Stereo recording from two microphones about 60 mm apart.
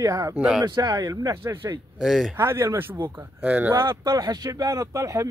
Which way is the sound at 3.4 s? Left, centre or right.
Right.